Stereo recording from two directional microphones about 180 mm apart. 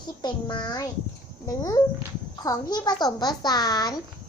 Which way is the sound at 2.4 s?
20° left (ahead or behind).